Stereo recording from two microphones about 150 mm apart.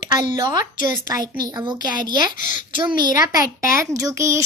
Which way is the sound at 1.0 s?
25° right (ahead or behind).